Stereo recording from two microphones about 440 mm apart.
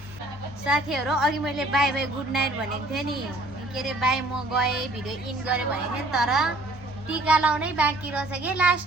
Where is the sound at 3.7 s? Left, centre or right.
Centre.